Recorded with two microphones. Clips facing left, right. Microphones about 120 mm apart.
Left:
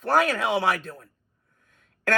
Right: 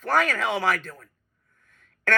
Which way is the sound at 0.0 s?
40° left (ahead or behind).